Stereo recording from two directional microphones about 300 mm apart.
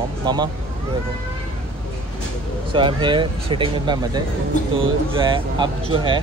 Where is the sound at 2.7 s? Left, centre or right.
Centre.